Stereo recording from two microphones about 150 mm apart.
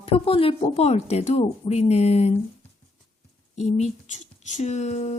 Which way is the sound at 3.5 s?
45° left (ahead or behind).